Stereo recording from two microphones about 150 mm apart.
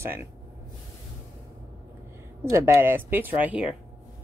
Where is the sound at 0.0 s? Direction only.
15° right (ahead or behind).